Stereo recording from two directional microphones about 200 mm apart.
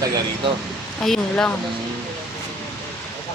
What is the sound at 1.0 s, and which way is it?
Speech, 5° left (ahead or behind).